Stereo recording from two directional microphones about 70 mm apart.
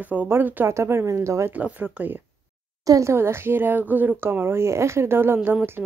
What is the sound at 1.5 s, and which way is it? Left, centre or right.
Speech, right.